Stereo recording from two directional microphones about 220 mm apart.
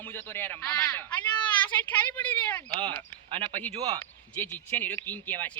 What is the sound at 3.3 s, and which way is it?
Speech, 30° right (ahead or behind).